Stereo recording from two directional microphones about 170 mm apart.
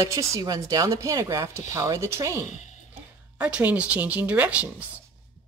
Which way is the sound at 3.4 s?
10° right (ahead or behind).